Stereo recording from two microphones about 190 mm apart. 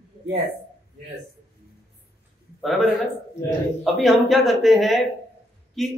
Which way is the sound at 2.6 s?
Centre (ahead or behind).